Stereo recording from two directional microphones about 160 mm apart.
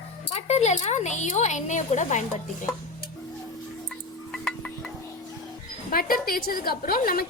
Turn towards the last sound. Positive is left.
turn(degrees=65)  # may be behind; listen again after turning